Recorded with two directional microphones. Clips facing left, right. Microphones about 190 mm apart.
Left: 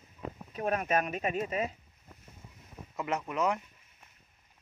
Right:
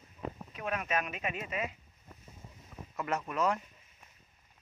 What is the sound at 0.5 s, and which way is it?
Speech, 40° left (ahead or behind).